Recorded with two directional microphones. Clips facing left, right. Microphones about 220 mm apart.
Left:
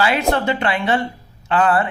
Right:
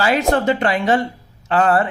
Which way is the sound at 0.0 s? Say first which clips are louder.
Right 2 dB; 45° right (ahead or behind).